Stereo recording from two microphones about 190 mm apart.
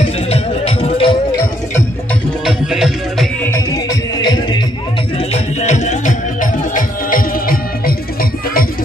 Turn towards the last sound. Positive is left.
turn(degrees=50)  # may be behind; listen again after turning